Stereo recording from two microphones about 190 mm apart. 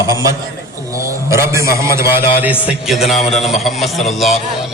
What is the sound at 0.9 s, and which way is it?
A man's voice, 15° right (ahead or behind).